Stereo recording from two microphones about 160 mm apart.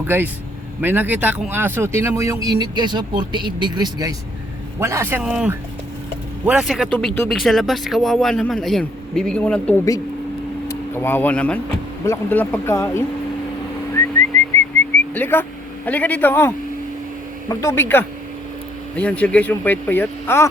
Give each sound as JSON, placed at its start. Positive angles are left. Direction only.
{"t": 0.1, "sound": "speech", "side_deg": -10}
{"t": 14.3, "sound": "whistling", "side_deg": 10}
{"t": 15.9, "sound": "speech", "side_deg": 10}
{"t": 17.5, "sound": "speech", "side_deg": 20}